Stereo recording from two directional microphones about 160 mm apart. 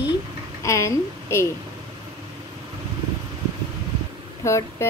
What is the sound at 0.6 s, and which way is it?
Speech, 20° left (ahead or behind).